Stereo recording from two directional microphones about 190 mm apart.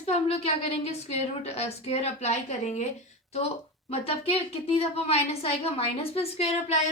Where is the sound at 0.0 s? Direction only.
30° left (ahead or behind).